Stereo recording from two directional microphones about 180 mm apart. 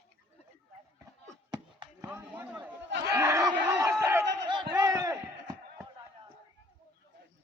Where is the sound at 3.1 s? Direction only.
15° right (ahead or behind).